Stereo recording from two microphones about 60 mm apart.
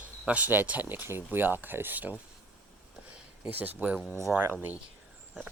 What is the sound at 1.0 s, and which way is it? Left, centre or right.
Speech, right.